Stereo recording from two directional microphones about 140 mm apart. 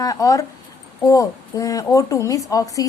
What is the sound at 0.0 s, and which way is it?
A woman's voice, 25° left (ahead or behind).